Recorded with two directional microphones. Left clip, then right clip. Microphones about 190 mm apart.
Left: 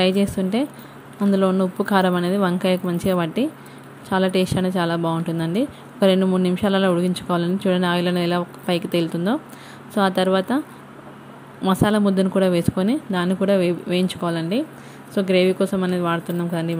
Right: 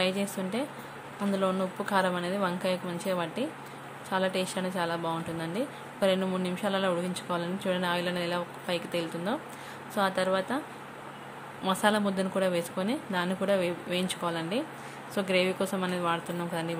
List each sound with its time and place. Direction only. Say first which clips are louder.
0.0 s speech: left 10 dB; 30° left (ahead or behind)
11.6 s speech: left 7 dB; 30° left (ahead or behind)